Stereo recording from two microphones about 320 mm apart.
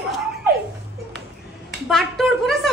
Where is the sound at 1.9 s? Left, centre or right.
Centre.